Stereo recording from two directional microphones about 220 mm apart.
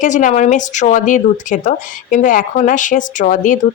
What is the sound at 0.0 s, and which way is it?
Speech, 35° left (ahead or behind).